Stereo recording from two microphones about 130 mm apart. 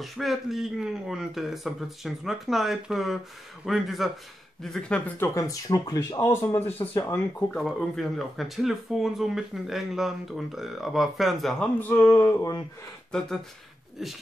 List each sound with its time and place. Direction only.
0.0 s speech: centre (ahead or behind); by 6.3 s 25° left (ahead or behind)
6.3 s speech: 15° left (ahead or behind)
7.5 s speech: 5° left (ahead or behind)
11.8 s speech: 20° left (ahead or behind)